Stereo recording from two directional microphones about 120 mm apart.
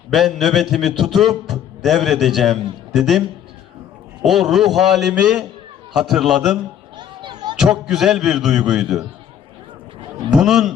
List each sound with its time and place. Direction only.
0.1 s a man's voice: centre (ahead or behind)
6.9 s children playing: 40° right (ahead or behind)
7.6 s a man's voice: 5° right (ahead or behind)
10.3 s a man's voice: 5° right (ahead or behind)